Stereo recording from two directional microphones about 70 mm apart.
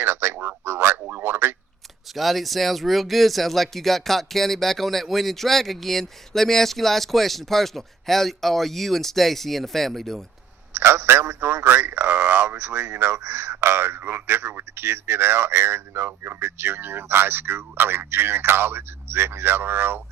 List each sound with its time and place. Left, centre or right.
0.0 s a sound: right
2.1 s speech: centre
10.8 s a man's voice: right